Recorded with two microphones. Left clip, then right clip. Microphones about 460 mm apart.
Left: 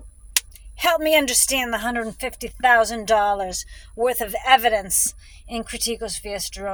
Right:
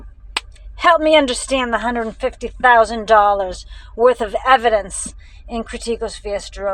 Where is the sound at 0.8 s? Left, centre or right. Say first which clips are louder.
Right 6 dB; left.